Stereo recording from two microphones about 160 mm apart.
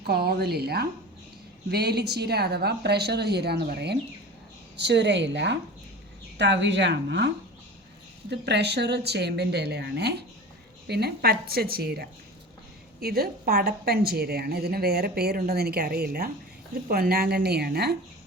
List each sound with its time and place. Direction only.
0.0 s a woman's voice: 85° right